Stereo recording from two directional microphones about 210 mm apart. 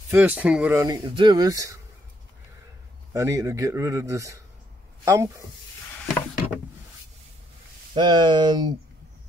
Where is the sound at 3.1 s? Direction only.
15° right (ahead or behind).